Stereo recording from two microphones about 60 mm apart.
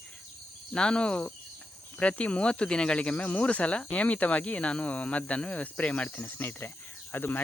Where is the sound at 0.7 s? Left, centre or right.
Centre.